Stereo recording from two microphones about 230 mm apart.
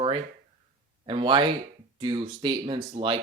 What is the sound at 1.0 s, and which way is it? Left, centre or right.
Speech, right.